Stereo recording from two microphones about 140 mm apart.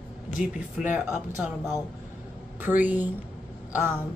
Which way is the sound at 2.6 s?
15° right (ahead or behind).